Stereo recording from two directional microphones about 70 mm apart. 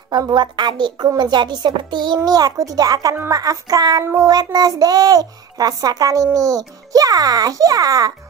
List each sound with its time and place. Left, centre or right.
0.1 s a woman's voice: right
2.5 s child singing: right
4.0 s child singing: right
4.3 s child singing: right